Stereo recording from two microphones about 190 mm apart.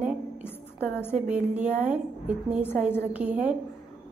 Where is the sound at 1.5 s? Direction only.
35° right (ahead or behind).